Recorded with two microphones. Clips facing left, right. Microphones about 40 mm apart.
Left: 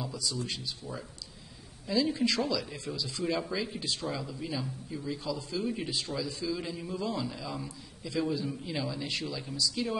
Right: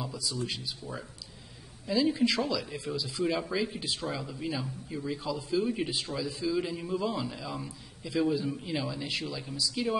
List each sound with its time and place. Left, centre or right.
0.0 s speech: centre